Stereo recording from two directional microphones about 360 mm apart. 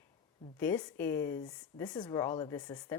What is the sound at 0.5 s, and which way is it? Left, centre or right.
A woman's voice, centre.